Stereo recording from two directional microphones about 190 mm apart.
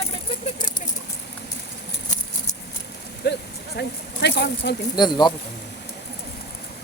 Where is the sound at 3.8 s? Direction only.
60° left (ahead or behind).